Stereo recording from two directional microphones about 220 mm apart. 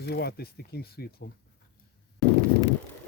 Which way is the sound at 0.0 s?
45° left (ahead or behind).